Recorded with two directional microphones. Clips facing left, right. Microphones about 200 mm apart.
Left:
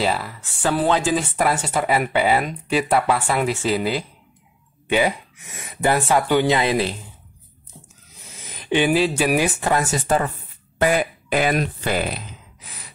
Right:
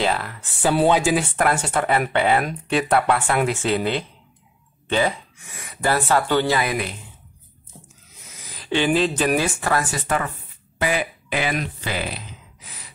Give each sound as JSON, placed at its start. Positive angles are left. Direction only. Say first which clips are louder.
{"t": 0.0, "sound": "speech", "louder": "even", "side_deg": 5}
{"t": 0.7, "sound": "speech", "louder": "right 2 dB", "side_deg": -15}
{"t": 1.3, "sound": "speech", "louder": "even", "side_deg": 5}
{"t": 8.4, "sound": "speech", "louder": "left 3 dB", "side_deg": 20}
{"t": 9.6, "sound": "speech", "louder": "left 2 dB", "side_deg": 20}
{"t": 10.8, "sound": "speech", "louder": "left 4 dB", "side_deg": 45}